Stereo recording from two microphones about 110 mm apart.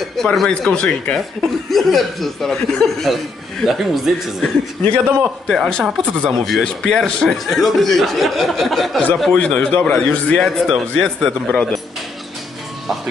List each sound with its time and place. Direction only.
0.2 s speech: 5° left (ahead or behind)
4.9 s a man's voice: 20° right (ahead or behind)
5.5 s speech: 5° left (ahead or behind)
9.4 s speech: 15° left (ahead or behind)